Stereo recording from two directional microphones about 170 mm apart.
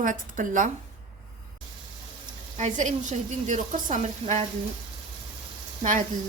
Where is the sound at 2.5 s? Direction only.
45° right (ahead or behind).